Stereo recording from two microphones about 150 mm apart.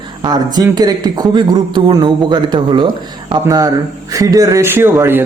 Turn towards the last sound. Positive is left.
turn(degrees=-15)  # may be behind; listen again after turning